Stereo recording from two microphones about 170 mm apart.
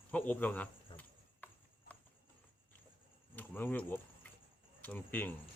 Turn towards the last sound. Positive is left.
turn(degrees=10)  # may be behind; listen again after turning